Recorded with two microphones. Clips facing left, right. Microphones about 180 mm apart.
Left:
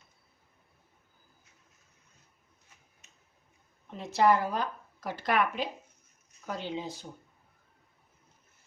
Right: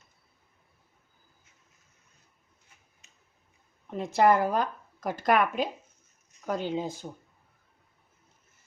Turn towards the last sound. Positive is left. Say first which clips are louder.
# right 5 dB
turn(degrees=-50)  # may be behind; listen again after turning